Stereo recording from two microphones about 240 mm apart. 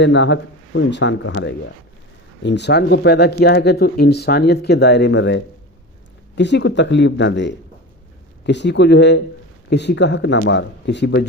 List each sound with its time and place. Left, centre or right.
0.0 s speech: left